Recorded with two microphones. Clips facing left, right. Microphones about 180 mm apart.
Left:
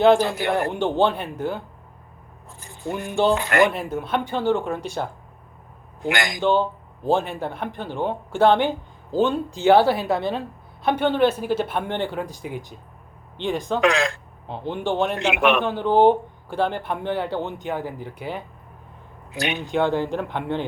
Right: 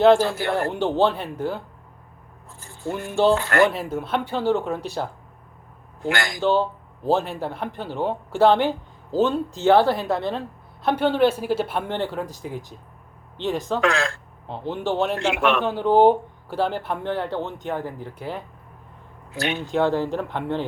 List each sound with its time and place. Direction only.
0.2 s speech: 15° left (ahead or behind)
0.7 s speech: 5° right (ahead or behind)
2.6 s a sound: 15° left (ahead or behind)
3.3 s speech: 15° left (ahead or behind)
3.7 s speech: centre (ahead or behind)
6.0 s speech: 15° left (ahead or behind)
6.4 s speech: 5° right (ahead or behind)
13.8 s speech: 15° left (ahead or behind)
14.4 s speech: centre (ahead or behind)
15.2 s speech: 15° left (ahead or behind)
15.6 s speech: 5° right (ahead or behind)
19.3 s speech: 15° left (ahead or behind)
19.7 s speech: centre (ahead or behind)